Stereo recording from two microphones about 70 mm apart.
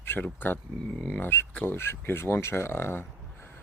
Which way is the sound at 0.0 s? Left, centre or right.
Left.